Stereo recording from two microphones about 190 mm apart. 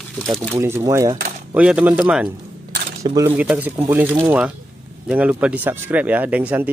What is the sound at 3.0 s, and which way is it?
Speech, 15° right (ahead or behind).